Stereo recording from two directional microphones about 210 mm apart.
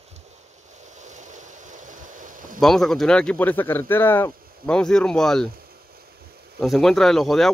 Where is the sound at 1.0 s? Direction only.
35° right (ahead or behind).